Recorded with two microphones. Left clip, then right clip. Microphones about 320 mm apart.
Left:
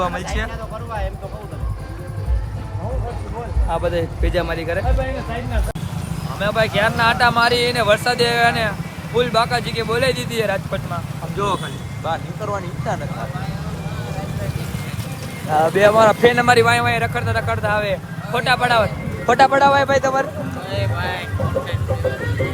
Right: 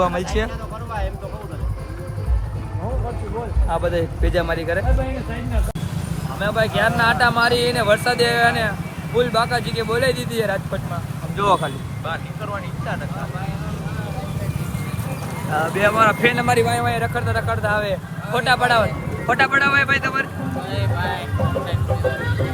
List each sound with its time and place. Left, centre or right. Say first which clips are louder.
0.0 s speech: right 2 dB; centre
3.7 s speech: left 1 dB; centre
6.4 s speech: left 1 dB; centre
15.5 s speech: left 4 dB; centre
16.6 s speech: left 4 dB; centre
19.3 s speech: left 4 dB; centre